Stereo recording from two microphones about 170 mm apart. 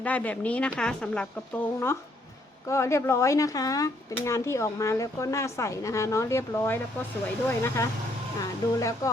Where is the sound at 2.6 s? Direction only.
15° left (ahead or behind).